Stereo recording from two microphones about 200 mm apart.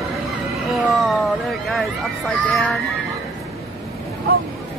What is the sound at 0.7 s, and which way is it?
Speech, centre (ahead or behind).